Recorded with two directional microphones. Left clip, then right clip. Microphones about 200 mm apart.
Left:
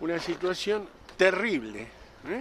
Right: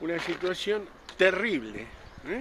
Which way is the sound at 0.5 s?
10° left (ahead or behind).